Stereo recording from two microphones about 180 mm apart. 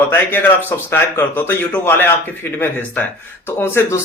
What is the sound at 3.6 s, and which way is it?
Speech, 15° left (ahead or behind).